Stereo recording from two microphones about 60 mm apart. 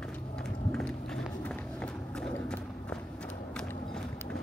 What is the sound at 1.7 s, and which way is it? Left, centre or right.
Horse, centre.